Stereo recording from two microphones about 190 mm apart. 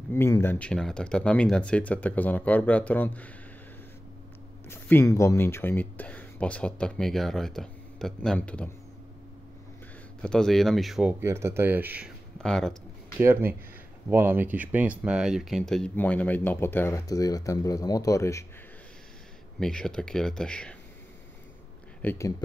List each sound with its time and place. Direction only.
0.1 s speech: 10° left (ahead or behind)
4.6 s speech: 10° left (ahead or behind)
10.2 s speech: 5° left (ahead or behind)
12.4 s speech: 5° left (ahead or behind)
13.2 s speech: 10° right (ahead or behind); by 18.4 s 15° left (ahead or behind)
19.6 s speech: 5° left (ahead or behind)
22.0 s speech: 10° left (ahead or behind)